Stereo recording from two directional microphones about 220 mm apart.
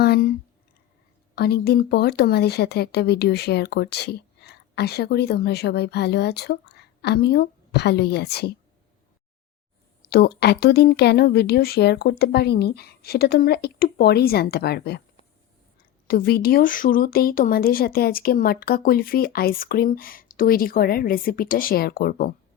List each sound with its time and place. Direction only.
0.0 s speech: 45° left (ahead or behind)
1.4 s speech: 45° left (ahead or behind)
10.1 s speech: 45° left (ahead or behind)
16.0 s speech: 45° left (ahead or behind)